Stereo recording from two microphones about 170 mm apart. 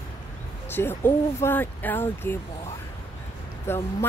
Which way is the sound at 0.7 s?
15° left (ahead or behind).